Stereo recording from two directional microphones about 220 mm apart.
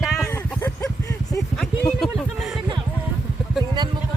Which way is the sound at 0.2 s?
10° left (ahead or behind).